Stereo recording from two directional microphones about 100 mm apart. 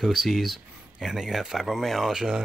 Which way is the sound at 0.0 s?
Centre (ahead or behind).